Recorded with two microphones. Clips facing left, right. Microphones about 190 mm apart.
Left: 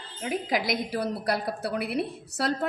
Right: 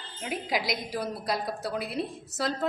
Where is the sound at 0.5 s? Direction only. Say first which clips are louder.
Left 2 dB; 55° left (ahead or behind).